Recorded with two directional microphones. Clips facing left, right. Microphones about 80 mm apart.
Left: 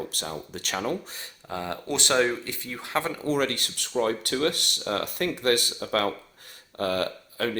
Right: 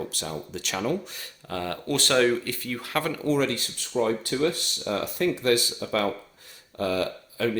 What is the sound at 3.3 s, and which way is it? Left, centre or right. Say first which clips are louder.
Speech: right 1 dB; left.